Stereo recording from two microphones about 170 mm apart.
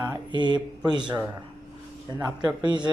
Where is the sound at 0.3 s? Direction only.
25° right (ahead or behind).